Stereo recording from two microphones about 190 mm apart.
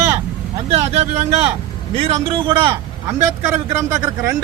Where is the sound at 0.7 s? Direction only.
35° right (ahead or behind).